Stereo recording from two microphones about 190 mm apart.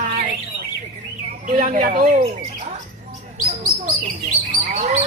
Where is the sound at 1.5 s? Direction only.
40° right (ahead or behind).